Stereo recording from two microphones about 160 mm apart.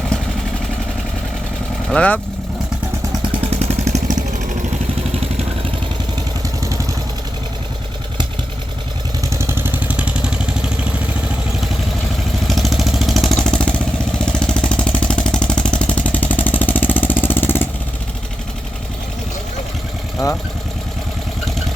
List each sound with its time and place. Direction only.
1.9 s speech: 10° left (ahead or behind)
3.4 s vehicle: 40° right (ahead or behind)
9.3 s vehicle: 15° right (ahead or behind)
12.5 s vehicle: centre (ahead or behind)